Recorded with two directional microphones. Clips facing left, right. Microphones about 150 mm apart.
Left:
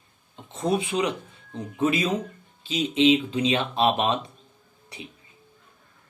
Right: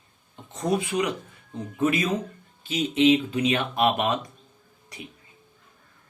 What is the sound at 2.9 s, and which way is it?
Speech, 15° left (ahead or behind).